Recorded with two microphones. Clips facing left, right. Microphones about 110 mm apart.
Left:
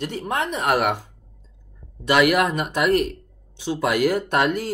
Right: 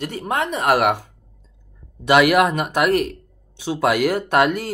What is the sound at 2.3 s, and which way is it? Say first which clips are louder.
Speech: right 4 dB; 65° right (ahead or behind).